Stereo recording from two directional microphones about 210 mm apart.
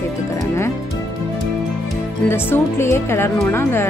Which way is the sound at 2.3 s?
10° left (ahead or behind).